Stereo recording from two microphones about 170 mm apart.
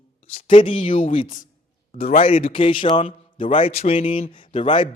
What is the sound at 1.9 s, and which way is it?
Speech, 55° left (ahead or behind).